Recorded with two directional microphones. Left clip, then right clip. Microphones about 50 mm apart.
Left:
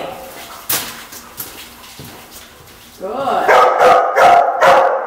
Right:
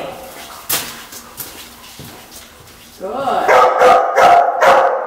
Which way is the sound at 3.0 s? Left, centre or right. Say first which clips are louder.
Left 1 dB; centre.